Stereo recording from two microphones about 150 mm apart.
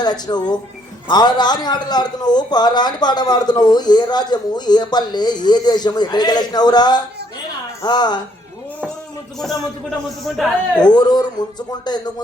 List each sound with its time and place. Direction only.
0.0 s a man's voice: 30° left (ahead or behind)
10.2 s a man's voice: centre (ahead or behind)
10.8 s a man's voice: 30° left (ahead or behind)